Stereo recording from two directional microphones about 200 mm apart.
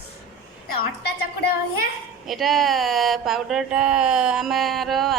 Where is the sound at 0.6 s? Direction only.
50° left (ahead or behind).